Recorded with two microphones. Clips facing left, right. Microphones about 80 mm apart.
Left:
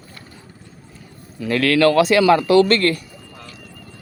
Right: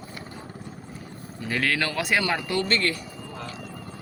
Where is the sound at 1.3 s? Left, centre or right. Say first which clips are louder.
Left 9 dB; left.